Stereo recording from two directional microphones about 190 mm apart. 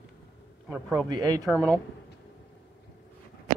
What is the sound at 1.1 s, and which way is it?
Speech, 20° right (ahead or behind).